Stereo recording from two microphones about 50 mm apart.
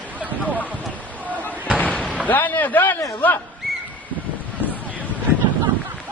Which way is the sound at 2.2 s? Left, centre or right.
Left.